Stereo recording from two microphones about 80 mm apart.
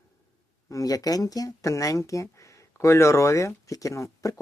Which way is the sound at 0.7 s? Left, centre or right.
Left.